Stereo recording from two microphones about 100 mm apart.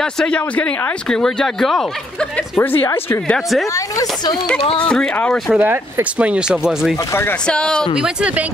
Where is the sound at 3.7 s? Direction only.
35° left (ahead or behind).